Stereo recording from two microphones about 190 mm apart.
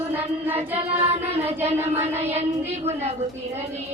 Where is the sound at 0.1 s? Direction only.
10° right (ahead or behind).